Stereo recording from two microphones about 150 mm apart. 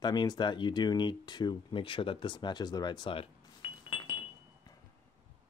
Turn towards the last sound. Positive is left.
turn(degrees=35)  # may be behind; listen again after turning